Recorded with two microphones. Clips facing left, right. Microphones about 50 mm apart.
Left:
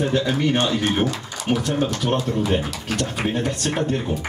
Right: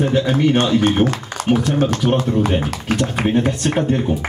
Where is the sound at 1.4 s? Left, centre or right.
Right.